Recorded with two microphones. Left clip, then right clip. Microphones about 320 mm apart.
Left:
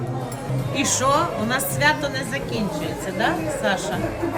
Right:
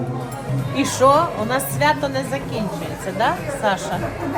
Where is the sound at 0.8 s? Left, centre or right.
Centre.